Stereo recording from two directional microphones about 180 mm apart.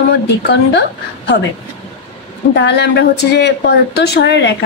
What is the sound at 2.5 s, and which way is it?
Speech, 75° left (ahead or behind).